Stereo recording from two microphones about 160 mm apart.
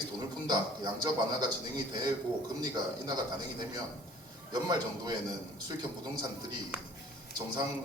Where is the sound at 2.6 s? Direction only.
25° right (ahead or behind).